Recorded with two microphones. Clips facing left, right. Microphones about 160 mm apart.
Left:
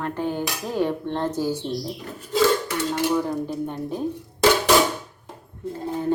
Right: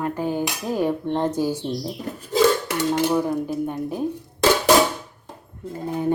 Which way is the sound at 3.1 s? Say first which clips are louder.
Right 2 dB; 10° right (ahead or behind).